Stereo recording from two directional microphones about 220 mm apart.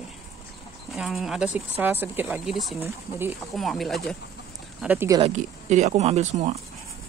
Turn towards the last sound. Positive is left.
turn(degrees=-30)  # may be behind; listen again after turning